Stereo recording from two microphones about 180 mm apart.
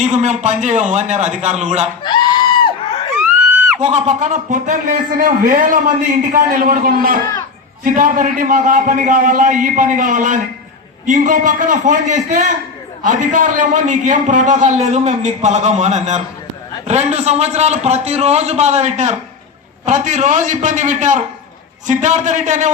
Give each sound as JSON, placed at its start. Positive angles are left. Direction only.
{"t": 0.0, "sound": "a man's voice", "side_deg": -40}
{"t": 3.2, "sound": "screaming", "side_deg": -5}
{"t": 3.8, "sound": "a man's voice", "side_deg": -35}